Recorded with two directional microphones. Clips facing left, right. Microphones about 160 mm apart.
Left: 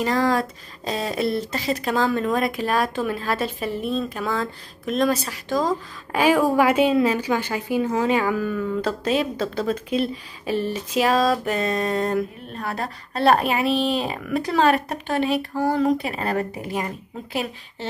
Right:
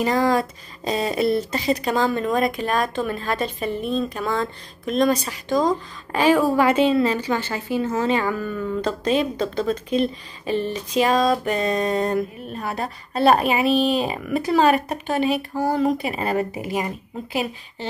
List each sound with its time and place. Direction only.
0.0 s speech: 5° right (ahead or behind)